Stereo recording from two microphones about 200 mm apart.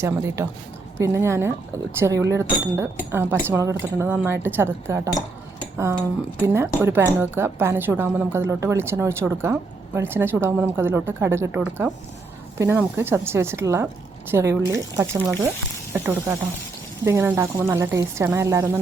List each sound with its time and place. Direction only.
0.0 s a woman's voice: 15° right (ahead or behind)